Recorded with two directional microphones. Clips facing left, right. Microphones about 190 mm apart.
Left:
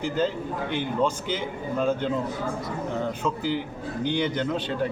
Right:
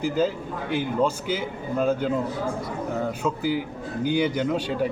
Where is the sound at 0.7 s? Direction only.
5° right (ahead or behind).